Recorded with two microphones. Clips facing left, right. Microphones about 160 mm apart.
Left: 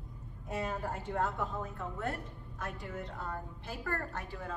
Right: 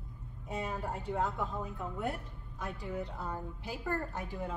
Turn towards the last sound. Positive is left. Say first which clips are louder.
# right 2 dB
turn(degrees=-15)  # may be behind; listen again after turning